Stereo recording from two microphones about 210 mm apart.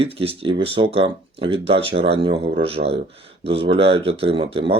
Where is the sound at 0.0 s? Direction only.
25° right (ahead or behind).